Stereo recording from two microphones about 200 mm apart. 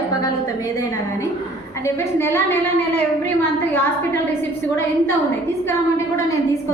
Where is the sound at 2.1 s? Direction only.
10° left (ahead or behind).